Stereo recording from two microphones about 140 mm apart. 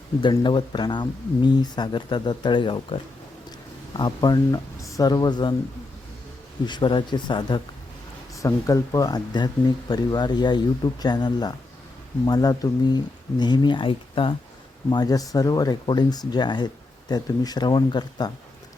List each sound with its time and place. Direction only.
0.2 s speech: 35° left (ahead or behind)
6.7 s speech: 35° left (ahead or behind)